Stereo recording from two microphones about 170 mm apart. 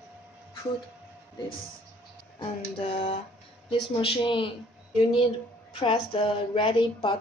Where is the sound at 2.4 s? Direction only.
35° left (ahead or behind).